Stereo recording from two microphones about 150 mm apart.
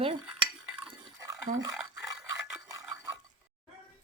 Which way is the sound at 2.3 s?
25° right (ahead or behind).